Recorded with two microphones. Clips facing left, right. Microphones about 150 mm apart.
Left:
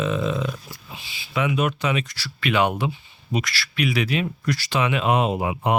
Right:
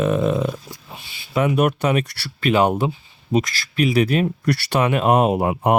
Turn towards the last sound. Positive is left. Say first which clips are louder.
# right 5 dB
turn(degrees=-50)  # may be behind; listen again after turning